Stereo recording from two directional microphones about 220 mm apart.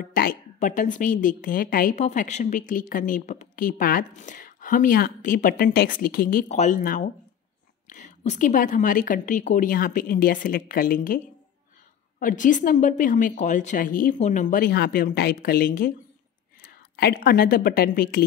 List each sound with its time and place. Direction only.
0.1 s a woman's voice: 40° left (ahead or behind)
12.2 s a woman's voice: 35° left (ahead or behind)
16.9 s a woman's voice: 45° left (ahead or behind)